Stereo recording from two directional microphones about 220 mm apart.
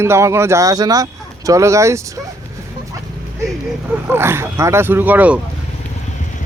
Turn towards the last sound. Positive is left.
turn(degrees=-5)  # may be behind; listen again after turning